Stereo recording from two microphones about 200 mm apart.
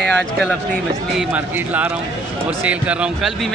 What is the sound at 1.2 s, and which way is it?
A man's voice, 5° right (ahead or behind).